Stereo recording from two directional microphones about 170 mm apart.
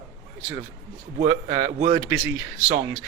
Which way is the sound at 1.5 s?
40° right (ahead or behind).